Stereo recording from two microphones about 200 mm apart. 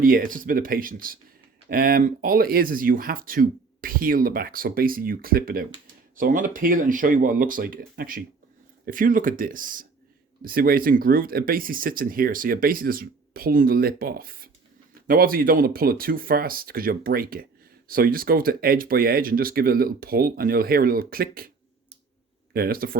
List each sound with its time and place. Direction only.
0.0 s speech: 45° right (ahead or behind)
22.5 s speech: 50° right (ahead or behind)